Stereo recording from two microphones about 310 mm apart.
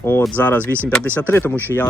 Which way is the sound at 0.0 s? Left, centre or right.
Centre.